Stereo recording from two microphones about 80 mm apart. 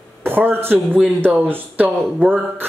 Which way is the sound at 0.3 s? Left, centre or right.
Right.